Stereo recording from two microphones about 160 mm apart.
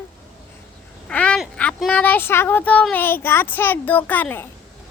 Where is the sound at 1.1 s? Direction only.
10° left (ahead or behind).